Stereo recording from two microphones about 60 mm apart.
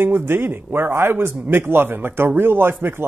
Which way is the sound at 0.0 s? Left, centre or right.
Right.